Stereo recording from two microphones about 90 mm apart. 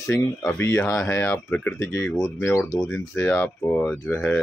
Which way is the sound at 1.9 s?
30° left (ahead or behind).